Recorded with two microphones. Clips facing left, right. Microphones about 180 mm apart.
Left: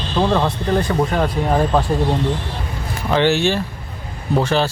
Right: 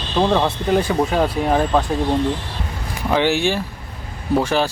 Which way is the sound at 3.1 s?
10° right (ahead or behind).